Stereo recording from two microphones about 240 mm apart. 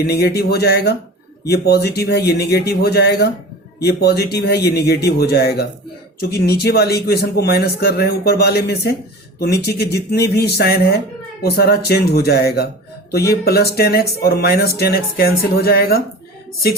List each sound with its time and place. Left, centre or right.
0.0 s a man's voice: left